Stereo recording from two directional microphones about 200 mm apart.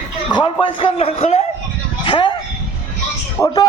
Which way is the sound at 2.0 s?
25° left (ahead or behind).